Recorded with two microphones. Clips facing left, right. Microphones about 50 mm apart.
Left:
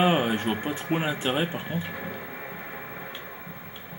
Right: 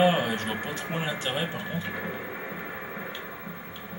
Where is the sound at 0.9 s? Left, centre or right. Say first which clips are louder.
Left 4 dB; left.